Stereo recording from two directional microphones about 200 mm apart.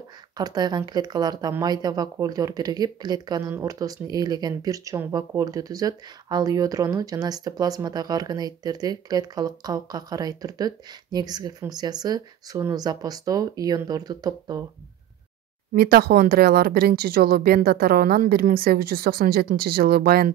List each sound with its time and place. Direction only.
0.4 s speech: 20° right (ahead or behind)
15.7 s speech: 50° right (ahead or behind)